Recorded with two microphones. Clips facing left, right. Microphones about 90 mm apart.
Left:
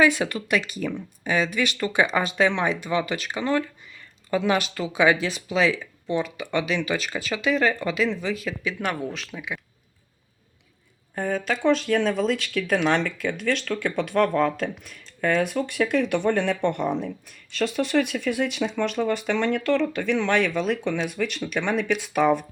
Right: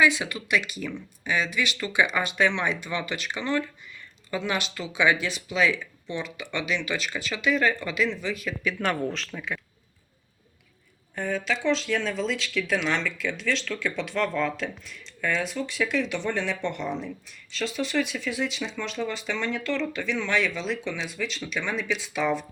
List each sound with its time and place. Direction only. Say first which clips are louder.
0.0 s speech: left 3 dB; 45° left (ahead or behind); by 8.7 s 30° left (ahead or behind)
8.8 s speech: right 2 dB; 10° left (ahead or behind)
11.1 s speech: left 2 dB; 40° left (ahead or behind)